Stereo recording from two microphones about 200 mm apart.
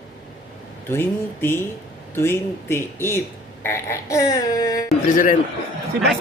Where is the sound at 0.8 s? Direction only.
10° left (ahead or behind).